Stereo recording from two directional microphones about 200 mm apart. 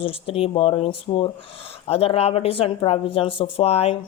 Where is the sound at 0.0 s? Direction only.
30° left (ahead or behind).